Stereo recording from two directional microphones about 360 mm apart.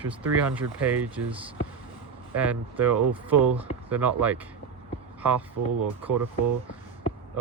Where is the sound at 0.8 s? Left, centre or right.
Centre.